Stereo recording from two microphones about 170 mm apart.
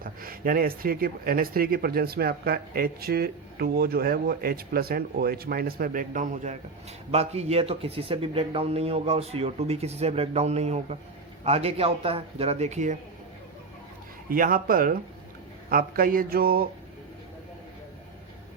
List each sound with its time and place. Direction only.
0.0 s a man's voice: 55° right (ahead or behind)
14.3 s speech: 55° right (ahead or behind)